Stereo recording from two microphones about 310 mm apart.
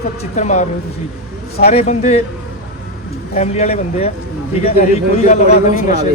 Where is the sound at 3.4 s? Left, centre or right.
Left.